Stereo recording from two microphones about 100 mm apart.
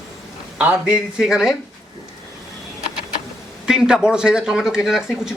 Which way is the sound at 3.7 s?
5° right (ahead or behind).